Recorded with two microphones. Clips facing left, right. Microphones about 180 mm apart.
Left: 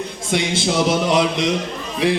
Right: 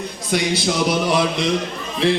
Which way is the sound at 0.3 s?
25° left (ahead or behind).